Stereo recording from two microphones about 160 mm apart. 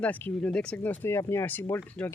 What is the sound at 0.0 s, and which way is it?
Speech, 10° left (ahead or behind).